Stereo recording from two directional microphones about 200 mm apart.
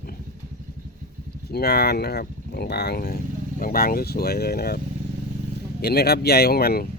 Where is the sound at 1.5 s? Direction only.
50° left (ahead or behind).